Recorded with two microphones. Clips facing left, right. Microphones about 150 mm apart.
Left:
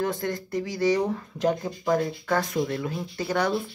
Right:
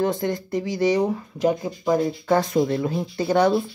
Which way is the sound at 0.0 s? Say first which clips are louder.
Right 5 dB; 25° right (ahead or behind).